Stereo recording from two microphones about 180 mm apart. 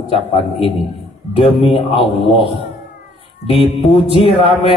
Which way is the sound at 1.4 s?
30° left (ahead or behind).